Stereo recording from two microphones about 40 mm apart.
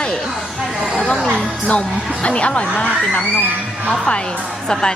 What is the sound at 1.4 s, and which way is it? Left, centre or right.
Music, left.